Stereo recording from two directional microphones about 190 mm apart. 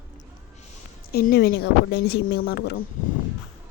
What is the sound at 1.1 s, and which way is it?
Speech, 55° left (ahead or behind).